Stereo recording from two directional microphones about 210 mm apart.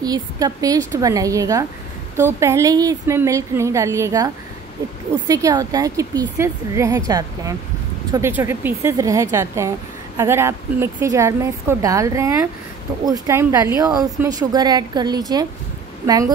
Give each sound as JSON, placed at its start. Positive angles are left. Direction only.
{"t": 0.0, "sound": "speech", "side_deg": -20}
{"t": 5.3, "sound": "a woman's voice", "side_deg": -15}